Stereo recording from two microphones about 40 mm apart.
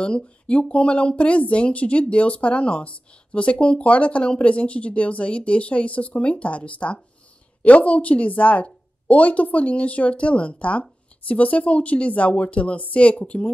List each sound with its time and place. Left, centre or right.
0.0 s speech: left